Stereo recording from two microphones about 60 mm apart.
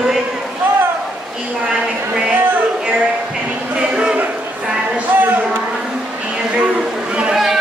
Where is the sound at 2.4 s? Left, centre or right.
Right.